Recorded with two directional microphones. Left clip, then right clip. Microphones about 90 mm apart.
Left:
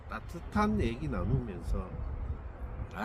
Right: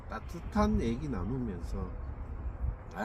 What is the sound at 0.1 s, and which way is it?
Speech, 20° left (ahead or behind).